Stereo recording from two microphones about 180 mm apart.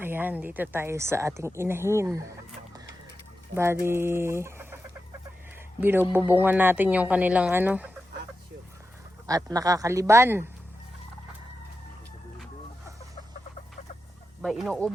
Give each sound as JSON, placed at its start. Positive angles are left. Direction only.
{"t": 0.0, "sound": "a woman's voice", "side_deg": -10}
{"t": 3.5, "sound": "chicken", "side_deg": -15}
{"t": 5.8, "sound": "a woman's voice", "side_deg": -10}
{"t": 9.2, "sound": "a woman's voice", "side_deg": -20}
{"t": 14.4, "sound": "speech", "side_deg": 0}